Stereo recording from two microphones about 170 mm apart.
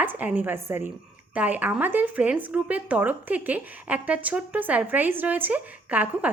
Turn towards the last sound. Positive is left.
turn(degrees=-10)  # may be behind; listen again after turning